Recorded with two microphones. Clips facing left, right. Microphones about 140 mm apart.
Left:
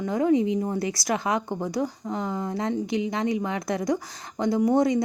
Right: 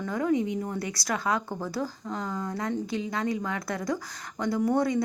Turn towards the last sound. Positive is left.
turn(degrees=20)  # may be behind; listen again after turning